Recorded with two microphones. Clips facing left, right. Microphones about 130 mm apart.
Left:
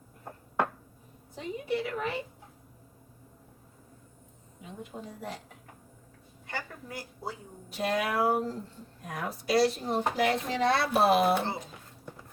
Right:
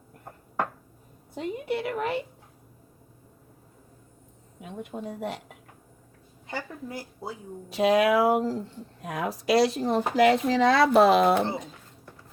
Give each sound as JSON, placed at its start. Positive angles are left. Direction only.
{"t": 1.4, "sound": "a woman's voice", "side_deg": -65}
{"t": 4.6, "sound": "a woman's voice", "side_deg": -65}
{"t": 6.5, "sound": "speech", "side_deg": -20}
{"t": 7.7, "sound": "speech", "side_deg": -90}